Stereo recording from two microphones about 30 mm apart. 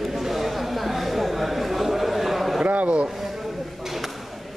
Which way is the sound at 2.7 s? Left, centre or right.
Right.